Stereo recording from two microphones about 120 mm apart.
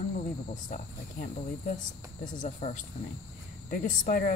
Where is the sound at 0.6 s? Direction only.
90° left.